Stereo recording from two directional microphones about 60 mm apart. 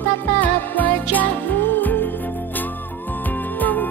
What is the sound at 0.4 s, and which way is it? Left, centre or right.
Music, left.